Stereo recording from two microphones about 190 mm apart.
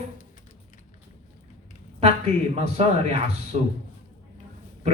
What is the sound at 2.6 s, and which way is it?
Speech, 35° right (ahead or behind).